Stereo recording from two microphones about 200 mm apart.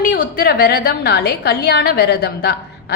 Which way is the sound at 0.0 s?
45° left (ahead or behind).